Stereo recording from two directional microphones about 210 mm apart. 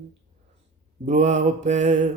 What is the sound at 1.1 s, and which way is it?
Music, 35° right (ahead or behind).